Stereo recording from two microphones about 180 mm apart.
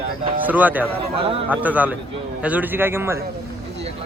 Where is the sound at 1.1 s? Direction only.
30° right (ahead or behind).